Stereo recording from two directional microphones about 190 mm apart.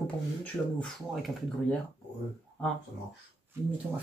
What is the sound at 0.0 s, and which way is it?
Speech, 5° left (ahead or behind).